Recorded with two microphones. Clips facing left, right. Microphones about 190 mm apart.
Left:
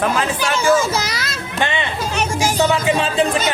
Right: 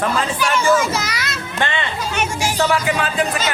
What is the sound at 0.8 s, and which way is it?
Speech, 35° left (ahead or behind).